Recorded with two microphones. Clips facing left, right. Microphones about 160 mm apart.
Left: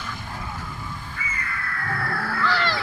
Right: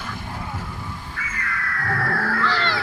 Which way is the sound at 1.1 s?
90° right.